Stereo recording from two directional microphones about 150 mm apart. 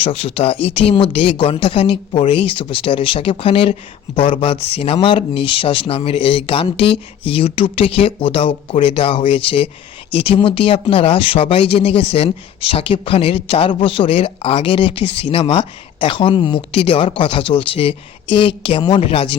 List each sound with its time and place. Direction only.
0.0 s speech: 40° left (ahead or behind)